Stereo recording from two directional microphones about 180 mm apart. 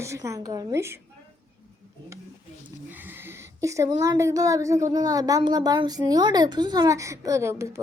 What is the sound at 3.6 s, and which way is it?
A woman's voice, 15° right (ahead or behind).